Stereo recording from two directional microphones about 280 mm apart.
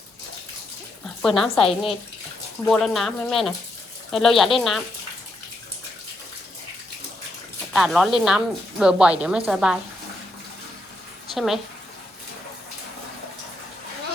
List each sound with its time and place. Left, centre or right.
1.0 s a sound: centre
1.5 s speech: centre
2.6 s a woman's voice: centre
7.7 s a woman's voice: centre
11.3 s a woman's voice: centre